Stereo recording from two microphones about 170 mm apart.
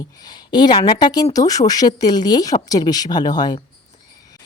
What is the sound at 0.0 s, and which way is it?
A woman's voice, 25° left (ahead or behind).